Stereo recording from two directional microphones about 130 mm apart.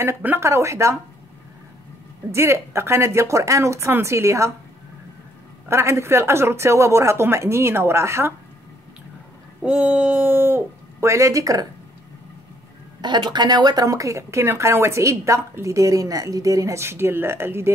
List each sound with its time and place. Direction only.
0.0 s speech: 20° right (ahead or behind)
2.3 s speech: 20° right (ahead or behind)
5.7 s speech: 20° right (ahead or behind)
9.6 s speech: 10° right (ahead or behind); by 11.6 s 25° right (ahead or behind)
13.0 s speech: 35° right (ahead or behind); by 17.6 s 20° right (ahead or behind)